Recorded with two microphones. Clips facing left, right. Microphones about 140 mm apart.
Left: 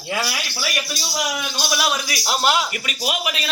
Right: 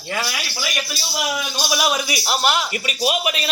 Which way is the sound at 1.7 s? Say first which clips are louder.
Right 3 dB; 15° right (ahead or behind).